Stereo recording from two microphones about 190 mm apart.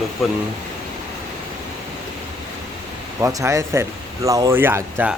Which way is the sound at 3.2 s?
15° right (ahead or behind).